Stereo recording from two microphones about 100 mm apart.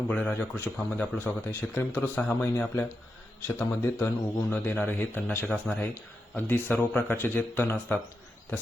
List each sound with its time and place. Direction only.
0.1 s a man's voice: 15° left (ahead or behind)